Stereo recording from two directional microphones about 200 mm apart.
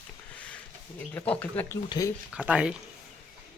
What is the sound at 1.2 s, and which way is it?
Speech, 10° left (ahead or behind).